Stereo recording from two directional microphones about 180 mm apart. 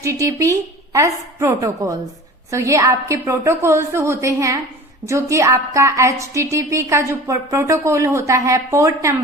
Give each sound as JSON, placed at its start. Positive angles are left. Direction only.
{"t": 0.0, "sound": "a woman's voice", "side_deg": -15}